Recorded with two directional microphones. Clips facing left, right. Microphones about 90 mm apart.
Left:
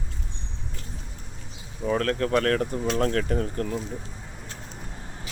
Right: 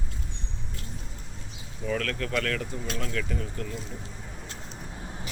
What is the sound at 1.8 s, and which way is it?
Speech, 35° left (ahead or behind).